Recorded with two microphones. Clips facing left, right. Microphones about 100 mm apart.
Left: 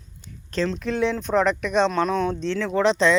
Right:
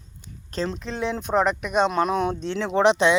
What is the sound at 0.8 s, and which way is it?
Speech, centre (ahead or behind).